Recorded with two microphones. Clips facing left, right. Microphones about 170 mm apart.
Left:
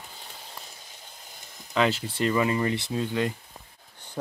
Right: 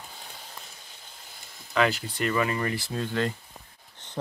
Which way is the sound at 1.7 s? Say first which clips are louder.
Even; 25° left (ahead or behind).